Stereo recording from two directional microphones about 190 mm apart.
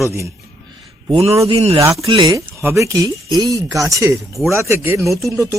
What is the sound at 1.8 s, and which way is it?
Speech, 15° right (ahead or behind).